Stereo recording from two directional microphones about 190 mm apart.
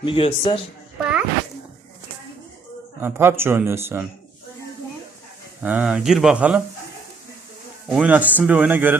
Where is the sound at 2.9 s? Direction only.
10° right (ahead or behind).